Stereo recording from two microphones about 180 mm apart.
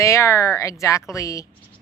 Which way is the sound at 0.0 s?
15° left (ahead or behind).